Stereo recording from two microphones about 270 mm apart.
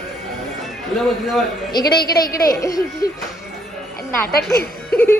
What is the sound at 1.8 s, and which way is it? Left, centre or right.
Speech, left.